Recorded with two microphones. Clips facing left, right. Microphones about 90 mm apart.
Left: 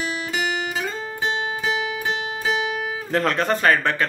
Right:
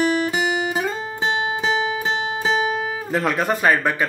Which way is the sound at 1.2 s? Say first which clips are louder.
Right 3 dB; 25° right (ahead or behind).